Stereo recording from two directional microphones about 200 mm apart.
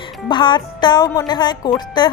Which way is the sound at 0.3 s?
20° left (ahead or behind).